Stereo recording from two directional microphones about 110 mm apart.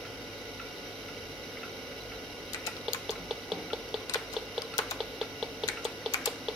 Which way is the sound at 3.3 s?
5° right (ahead or behind).